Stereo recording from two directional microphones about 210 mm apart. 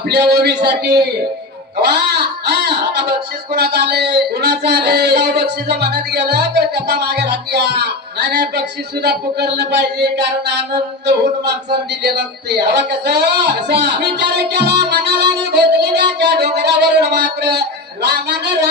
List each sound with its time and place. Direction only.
0.4 s speech: 50° right (ahead or behind)
12.0 s speech: 50° right (ahead or behind)
15.5 s a sound: 55° right (ahead or behind)